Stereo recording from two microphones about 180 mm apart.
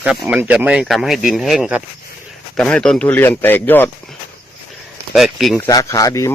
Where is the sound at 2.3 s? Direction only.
5° left (ahead or behind).